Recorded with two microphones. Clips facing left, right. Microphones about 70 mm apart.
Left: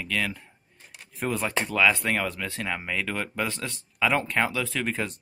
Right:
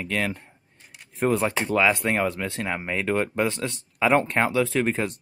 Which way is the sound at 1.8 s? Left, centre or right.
Centre.